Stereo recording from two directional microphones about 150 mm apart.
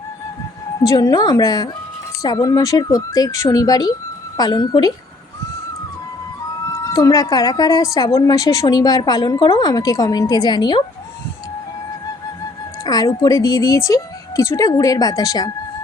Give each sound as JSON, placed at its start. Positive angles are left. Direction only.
{"t": 0.9, "sound": "a woman's voice", "side_deg": 25}
{"t": 6.7, "sound": "a woman's voice", "side_deg": 20}
{"t": 12.8, "sound": "a woman's voice", "side_deg": 25}